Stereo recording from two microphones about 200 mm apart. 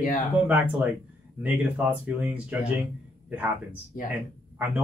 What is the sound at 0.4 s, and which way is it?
Speech, 5° right (ahead or behind).